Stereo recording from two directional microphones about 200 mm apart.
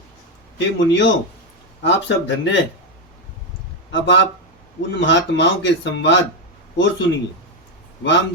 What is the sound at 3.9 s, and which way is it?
Speech, 65° left (ahead or behind).